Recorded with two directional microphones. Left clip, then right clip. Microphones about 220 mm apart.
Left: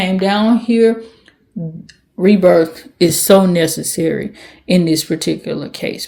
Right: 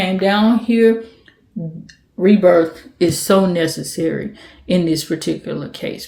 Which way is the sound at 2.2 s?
35° left (ahead or behind).